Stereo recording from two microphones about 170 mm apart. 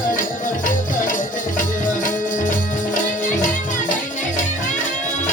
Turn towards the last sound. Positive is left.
turn(degrees=50)  # may be behind; listen again after turning